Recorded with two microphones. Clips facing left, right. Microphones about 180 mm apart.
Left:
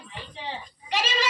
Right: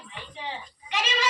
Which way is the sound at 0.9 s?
35° left (ahead or behind).